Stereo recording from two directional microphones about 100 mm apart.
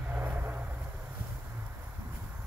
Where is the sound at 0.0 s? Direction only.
15° right (ahead or behind).